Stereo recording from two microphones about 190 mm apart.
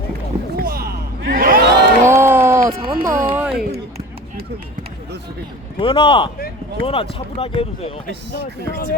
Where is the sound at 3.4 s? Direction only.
5° right (ahead or behind).